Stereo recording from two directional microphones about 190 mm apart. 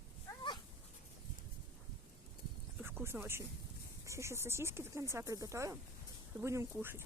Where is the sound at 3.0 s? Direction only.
10° right (ahead or behind).